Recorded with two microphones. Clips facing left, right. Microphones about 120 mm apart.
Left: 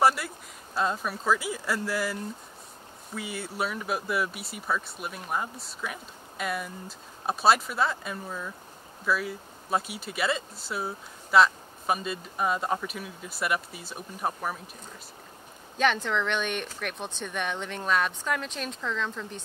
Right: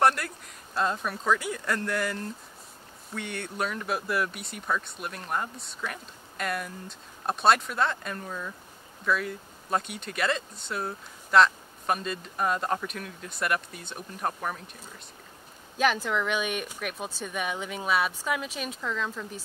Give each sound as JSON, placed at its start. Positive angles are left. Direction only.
{"t": 0.0, "sound": "a sound", "side_deg": 5}
{"t": 0.7, "sound": "speech", "side_deg": 0}
{"t": 15.8, "sound": "speech", "side_deg": -5}